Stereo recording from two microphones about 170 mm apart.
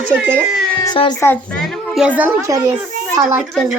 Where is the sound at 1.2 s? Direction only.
10° left (ahead or behind); by 2.4 s 10° right (ahead or behind).